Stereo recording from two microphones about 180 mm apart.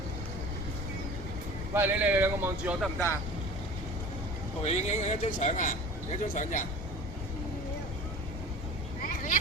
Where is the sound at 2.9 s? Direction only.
15° left (ahead or behind).